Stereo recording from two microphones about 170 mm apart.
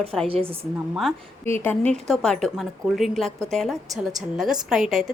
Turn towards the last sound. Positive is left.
turn(degrees=0)  # may be behind; listen again after turning